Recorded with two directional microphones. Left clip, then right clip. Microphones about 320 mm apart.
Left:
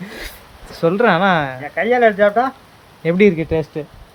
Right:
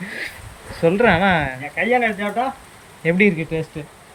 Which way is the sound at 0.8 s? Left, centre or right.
Centre.